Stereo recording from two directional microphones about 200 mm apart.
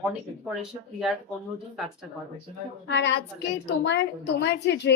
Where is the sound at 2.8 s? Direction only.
60° left (ahead or behind).